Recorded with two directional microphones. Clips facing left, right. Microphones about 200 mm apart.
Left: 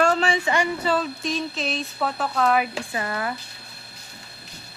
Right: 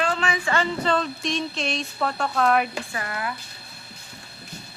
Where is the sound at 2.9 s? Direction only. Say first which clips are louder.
Left 3 dB; 30° left (ahead or behind).